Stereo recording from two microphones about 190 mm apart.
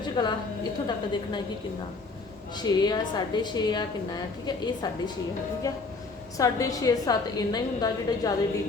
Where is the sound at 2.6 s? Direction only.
20° left (ahead or behind).